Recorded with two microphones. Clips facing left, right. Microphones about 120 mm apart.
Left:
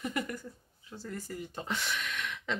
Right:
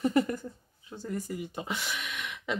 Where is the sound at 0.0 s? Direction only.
30° right (ahead or behind).